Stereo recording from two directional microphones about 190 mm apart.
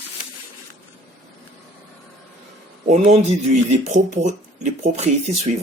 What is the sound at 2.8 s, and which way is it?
Speech, 35° right (ahead or behind).